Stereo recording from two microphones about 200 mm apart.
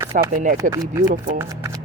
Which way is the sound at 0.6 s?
15° right (ahead or behind).